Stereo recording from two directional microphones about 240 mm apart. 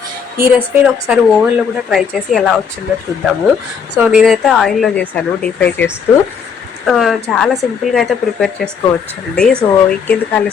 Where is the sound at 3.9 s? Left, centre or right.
Centre.